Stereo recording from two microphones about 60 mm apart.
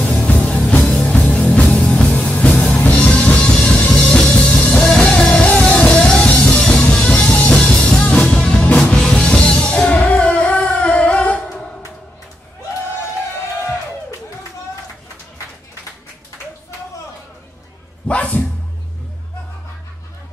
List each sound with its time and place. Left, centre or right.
0.0 s music: centre
4.7 s music: centre
18.0 s dog: left